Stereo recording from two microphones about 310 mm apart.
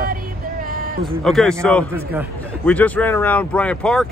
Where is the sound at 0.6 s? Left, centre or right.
Right.